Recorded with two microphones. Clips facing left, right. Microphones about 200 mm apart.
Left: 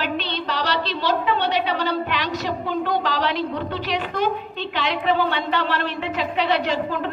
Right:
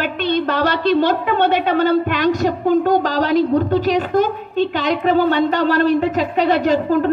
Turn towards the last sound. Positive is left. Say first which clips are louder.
# right 8 dB
turn(degrees=-45)  # may be behind; listen again after turning